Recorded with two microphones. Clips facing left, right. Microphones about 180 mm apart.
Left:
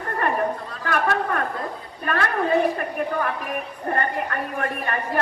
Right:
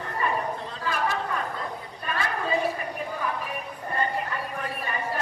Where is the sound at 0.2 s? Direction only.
65° left (ahead or behind).